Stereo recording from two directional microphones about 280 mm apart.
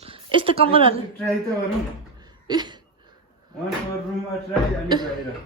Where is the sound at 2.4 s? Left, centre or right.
Centre.